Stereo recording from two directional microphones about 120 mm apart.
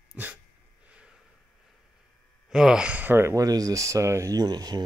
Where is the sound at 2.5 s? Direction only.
5° right (ahead or behind).